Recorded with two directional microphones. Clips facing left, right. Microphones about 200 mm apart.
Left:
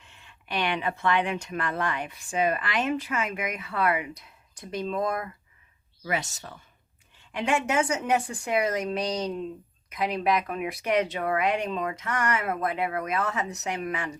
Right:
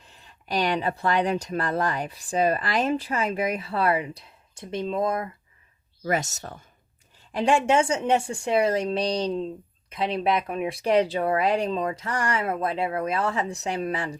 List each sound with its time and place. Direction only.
0.0 s speech: 35° right (ahead or behind)
6.1 s speech: 45° right (ahead or behind)
7.2 s a woman's voice: 35° right (ahead or behind)